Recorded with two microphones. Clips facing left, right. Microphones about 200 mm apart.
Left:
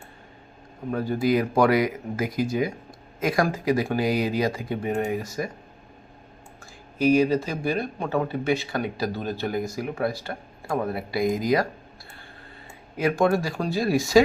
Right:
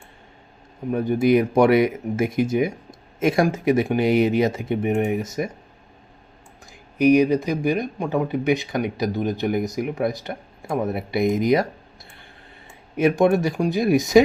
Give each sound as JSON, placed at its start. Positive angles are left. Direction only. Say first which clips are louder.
{"t": 0.9, "sound": "speech", "louder": "right 5 dB", "side_deg": -20}
{"t": 7.0, "sound": "speech", "louder": "right 4 dB", "side_deg": -15}
{"t": 13.0, "sound": "speech", "louder": "right 4 dB", "side_deg": -20}